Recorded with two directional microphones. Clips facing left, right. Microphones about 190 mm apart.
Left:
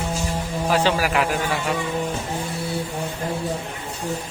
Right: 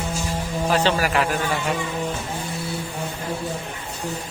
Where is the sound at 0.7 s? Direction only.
10° left (ahead or behind).